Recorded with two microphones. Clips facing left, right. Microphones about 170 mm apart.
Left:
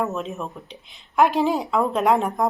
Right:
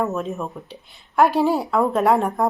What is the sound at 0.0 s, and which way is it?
A woman's voice, centre (ahead or behind).